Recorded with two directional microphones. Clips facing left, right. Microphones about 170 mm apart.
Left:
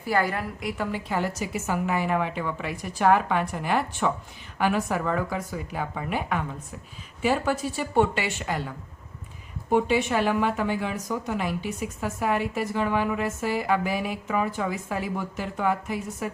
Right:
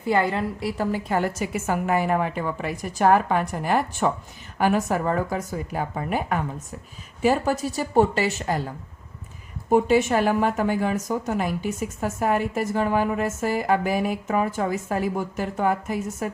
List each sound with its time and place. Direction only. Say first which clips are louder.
0.0 s a woman's voice: right 3 dB; 25° right (ahead or behind)
0.8 s a woman's voice: right 4 dB; 40° right (ahead or behind)